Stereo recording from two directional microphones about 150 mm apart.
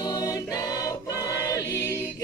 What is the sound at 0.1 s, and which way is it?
Choir, 25° left (ahead or behind).